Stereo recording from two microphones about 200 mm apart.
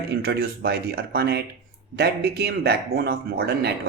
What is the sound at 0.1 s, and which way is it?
Speech, 50° right (ahead or behind).